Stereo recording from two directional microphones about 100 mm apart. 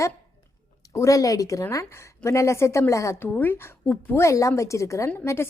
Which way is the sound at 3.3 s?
20° left (ahead or behind).